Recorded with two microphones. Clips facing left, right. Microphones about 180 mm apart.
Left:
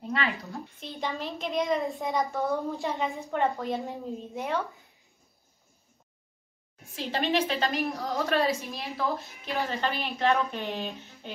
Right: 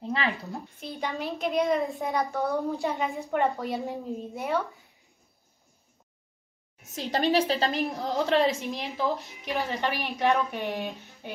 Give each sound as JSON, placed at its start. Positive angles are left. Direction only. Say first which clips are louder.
{"t": 0.0, "sound": "a woman's voice", "louder": "right 1 dB", "side_deg": -25}
{"t": 0.7, "sound": "a child's voice", "louder": "right 1 dB", "side_deg": 0}
{"t": 6.9, "sound": "a woman's voice", "louder": "right 3 dB", "side_deg": -40}